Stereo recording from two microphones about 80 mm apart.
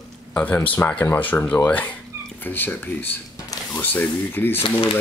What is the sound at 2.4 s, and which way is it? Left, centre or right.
Speech, left.